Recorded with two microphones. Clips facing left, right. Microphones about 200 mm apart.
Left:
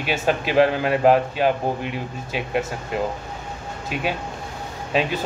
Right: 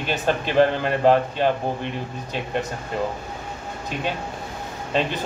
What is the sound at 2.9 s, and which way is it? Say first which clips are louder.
Speech: left 1 dB; 5° left (ahead or behind).